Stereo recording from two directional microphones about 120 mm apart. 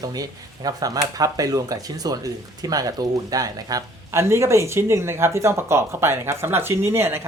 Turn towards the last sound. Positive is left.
turn(degrees=-20)  # may be behind; listen again after turning